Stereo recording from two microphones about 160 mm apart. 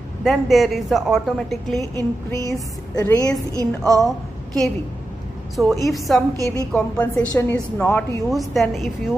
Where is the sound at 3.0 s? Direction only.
25° left (ahead or behind).